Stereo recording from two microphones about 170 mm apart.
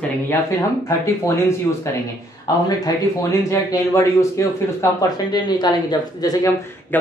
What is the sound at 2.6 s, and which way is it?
Speech, 20° left (ahead or behind).